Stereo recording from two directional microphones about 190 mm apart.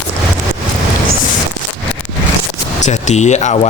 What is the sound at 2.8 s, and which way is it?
Speech, 40° left (ahead or behind).